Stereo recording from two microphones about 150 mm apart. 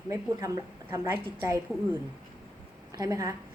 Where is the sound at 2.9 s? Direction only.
20° right (ahead or behind).